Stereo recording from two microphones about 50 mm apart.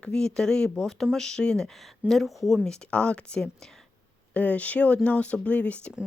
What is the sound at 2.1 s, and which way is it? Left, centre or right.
Speech, centre.